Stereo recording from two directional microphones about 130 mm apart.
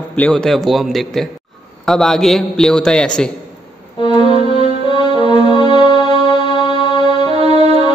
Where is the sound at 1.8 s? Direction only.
5° left (ahead or behind).